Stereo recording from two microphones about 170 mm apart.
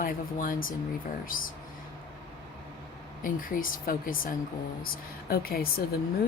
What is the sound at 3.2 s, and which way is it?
Speech, 55° left (ahead or behind).